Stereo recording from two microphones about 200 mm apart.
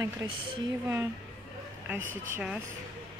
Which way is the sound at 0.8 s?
10° right (ahead or behind).